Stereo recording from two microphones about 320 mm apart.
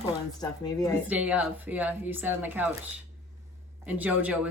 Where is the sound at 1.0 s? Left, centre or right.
Centre.